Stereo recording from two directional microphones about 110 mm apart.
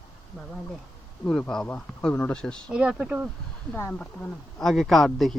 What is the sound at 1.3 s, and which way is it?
Speech, 5° left (ahead or behind).